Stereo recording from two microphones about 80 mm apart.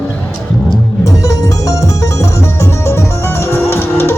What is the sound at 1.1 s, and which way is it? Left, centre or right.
Music, left.